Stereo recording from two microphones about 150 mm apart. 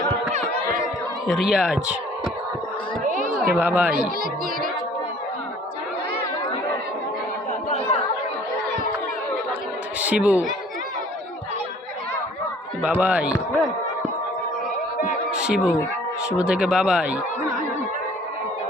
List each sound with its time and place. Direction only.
1.3 s a man's voice: 5° right (ahead or behind)
3.0 s a sound: 60° right (ahead or behind)
3.5 s speech: 10° right (ahead or behind)
10.0 s a woman's voice: 10° right (ahead or behind)
12.8 s speech: 10° right (ahead or behind)
15.3 s speech: 5° right (ahead or behind)